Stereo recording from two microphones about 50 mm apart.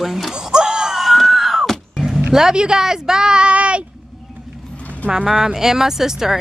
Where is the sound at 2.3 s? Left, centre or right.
Centre.